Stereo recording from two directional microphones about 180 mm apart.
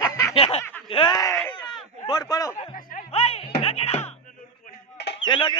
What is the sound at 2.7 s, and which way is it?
Music, 50° left (ahead or behind).